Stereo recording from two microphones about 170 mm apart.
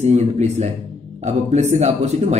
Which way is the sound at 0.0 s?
40° right (ahead or behind).